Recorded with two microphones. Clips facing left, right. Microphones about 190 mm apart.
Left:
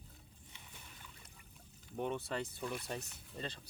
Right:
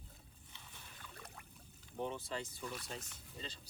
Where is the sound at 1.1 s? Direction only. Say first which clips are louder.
Right 7 dB; 65° right (ahead or behind).